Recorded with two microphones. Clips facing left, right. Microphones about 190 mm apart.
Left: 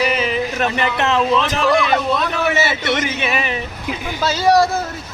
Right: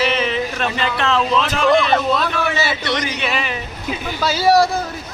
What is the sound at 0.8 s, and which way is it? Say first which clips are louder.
A man's voice: even; 20° left (ahead or behind).